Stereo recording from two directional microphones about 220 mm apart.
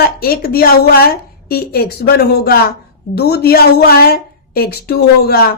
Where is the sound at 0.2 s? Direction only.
45° left (ahead or behind).